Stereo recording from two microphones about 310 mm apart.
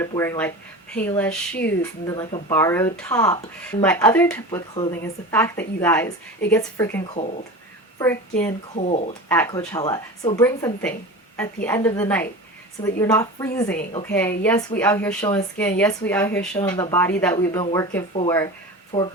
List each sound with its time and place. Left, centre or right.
0.0 s a woman's voice: centre
8.7 s speech: left
9.3 s a woman's voice: centre